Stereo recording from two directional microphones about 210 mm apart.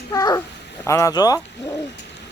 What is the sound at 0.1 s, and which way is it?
A child's voice, 15° left (ahead or behind).